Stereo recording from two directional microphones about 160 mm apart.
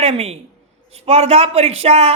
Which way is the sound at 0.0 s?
40° right (ahead or behind).